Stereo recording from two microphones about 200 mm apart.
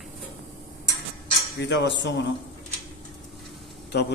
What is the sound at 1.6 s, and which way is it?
Speech, 60° left (ahead or behind).